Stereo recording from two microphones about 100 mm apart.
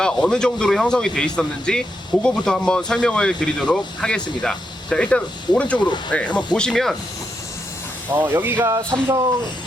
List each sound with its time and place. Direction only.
0.0 s speech: 10° left (ahead or behind)
8.1 s speech: 20° right (ahead or behind)
8.7 s speech: 35° right (ahead or behind)